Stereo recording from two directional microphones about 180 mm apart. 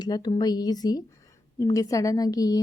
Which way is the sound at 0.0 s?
25° left (ahead or behind).